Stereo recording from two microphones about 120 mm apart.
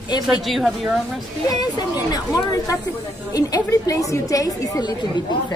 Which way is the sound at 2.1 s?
30° left (ahead or behind).